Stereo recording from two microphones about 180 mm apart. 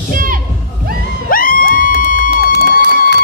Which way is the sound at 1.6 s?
65° right (ahead or behind).